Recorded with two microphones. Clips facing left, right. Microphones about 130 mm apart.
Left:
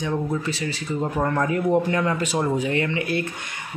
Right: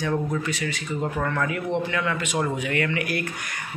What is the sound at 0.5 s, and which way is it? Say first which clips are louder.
Speech: left 2 dB; 30° left (ahead or behind).